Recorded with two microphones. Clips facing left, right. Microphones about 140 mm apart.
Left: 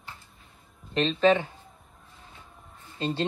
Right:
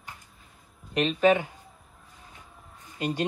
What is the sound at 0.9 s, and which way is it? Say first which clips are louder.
Speech: even; 30° left (ahead or behind).